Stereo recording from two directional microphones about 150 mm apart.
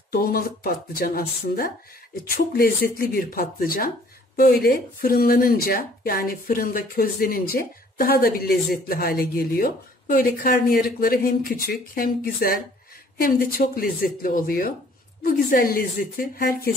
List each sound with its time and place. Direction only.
0.1 s speech: 85° left
2.2 s speech: 85° left